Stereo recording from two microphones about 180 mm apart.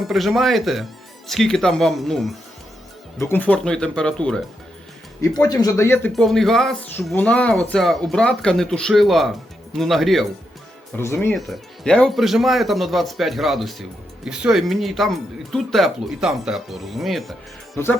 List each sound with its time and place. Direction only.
0.0 s speech: centre (ahead or behind)
5.2 s speech: 20° left (ahead or behind)
6.1 s speech: centre (ahead or behind)
10.9 s speech: 15° left (ahead or behind)
11.3 s speech: centre (ahead or behind)